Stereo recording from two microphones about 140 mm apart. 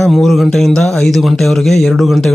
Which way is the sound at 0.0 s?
Centre (ahead or behind).